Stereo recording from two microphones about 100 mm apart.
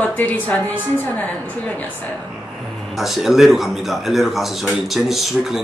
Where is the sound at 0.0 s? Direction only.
15° left (ahead or behind).